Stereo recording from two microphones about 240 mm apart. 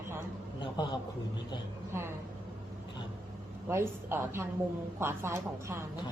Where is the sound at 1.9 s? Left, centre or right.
Centre.